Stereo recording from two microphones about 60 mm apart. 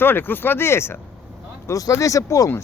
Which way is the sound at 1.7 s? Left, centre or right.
Left.